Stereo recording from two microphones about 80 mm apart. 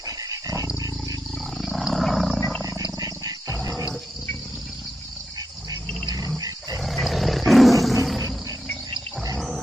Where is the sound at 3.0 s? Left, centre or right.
Right.